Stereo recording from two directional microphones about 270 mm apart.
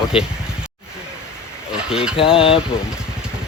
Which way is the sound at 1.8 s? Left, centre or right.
Centre.